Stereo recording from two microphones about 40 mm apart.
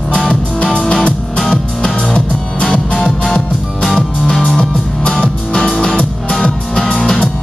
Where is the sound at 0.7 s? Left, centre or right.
Centre.